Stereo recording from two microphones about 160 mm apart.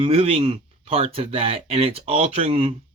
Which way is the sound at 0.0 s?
35° right (ahead or behind).